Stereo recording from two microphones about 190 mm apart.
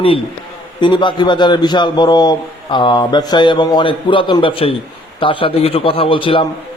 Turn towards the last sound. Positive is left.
turn(degrees=25)  # may be behind; listen again after turning